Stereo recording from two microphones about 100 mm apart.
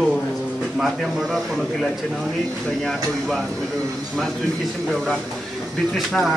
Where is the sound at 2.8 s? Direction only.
Centre (ahead or behind).